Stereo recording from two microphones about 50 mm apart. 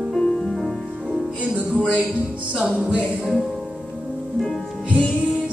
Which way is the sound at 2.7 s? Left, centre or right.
Right.